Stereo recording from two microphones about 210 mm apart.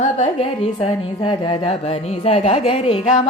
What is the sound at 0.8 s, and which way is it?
A woman's voice, 20° left (ahead or behind).